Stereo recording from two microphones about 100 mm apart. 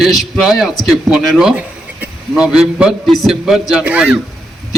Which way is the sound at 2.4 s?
5° right (ahead or behind).